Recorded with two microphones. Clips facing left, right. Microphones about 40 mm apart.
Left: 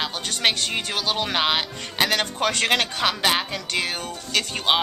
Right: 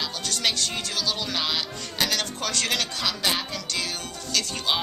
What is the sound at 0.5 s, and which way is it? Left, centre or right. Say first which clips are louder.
Speech: left 3 dB; left.